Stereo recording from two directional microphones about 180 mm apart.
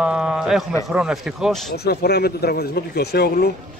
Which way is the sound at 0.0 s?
5° right (ahead or behind).